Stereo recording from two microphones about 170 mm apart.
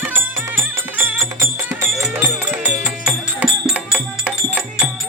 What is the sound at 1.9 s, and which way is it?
Music, centre (ahead or behind).